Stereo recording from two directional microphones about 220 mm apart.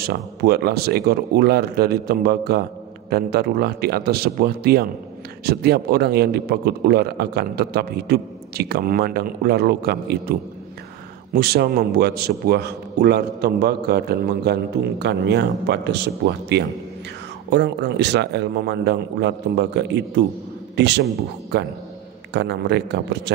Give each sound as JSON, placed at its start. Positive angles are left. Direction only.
{"t": 0.0, "sound": "a man's voice", "side_deg": -45}
{"t": 11.3, "sound": "a man's voice", "side_deg": -45}